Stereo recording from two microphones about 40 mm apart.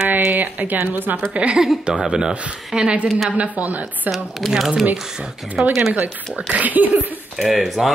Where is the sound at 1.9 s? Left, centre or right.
Centre.